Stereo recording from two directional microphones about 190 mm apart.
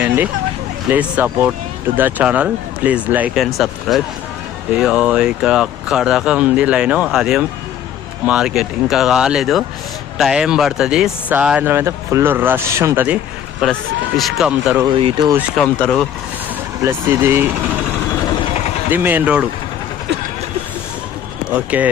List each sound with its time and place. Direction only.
0.9 s speech: 10° right (ahead or behind)
13.6 s speech: centre (ahead or behind)
14.9 s speech: 30° right (ahead or behind)
15.3 s speech: 5° right (ahead or behind)
15.6 s speech: 5° left (ahead or behind)
16.8 s speech: 10° right (ahead or behind)
18.9 s speech: 10° right (ahead or behind)
21.5 s speech: 10° right (ahead or behind)